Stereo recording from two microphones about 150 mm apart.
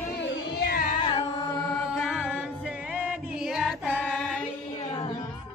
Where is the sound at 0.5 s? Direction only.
85° left.